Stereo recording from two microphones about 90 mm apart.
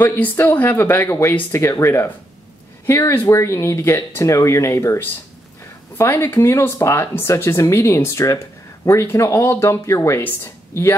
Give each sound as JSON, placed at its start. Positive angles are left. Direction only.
{"t": 0.0, "sound": "a woman's voice", "side_deg": 20}